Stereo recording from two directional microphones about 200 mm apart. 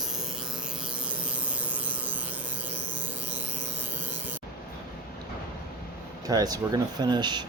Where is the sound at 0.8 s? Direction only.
5° right (ahead or behind).